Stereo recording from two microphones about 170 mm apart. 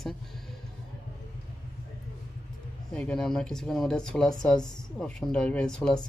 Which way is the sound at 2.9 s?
5° left (ahead or behind).